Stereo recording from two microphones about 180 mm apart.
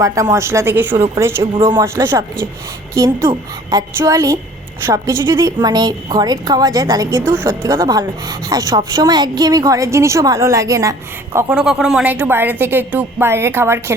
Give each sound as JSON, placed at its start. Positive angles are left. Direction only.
{"t": 0.0, "sound": "a woman's voice", "side_deg": -20}
{"t": 11.3, "sound": "a woman's voice", "side_deg": -5}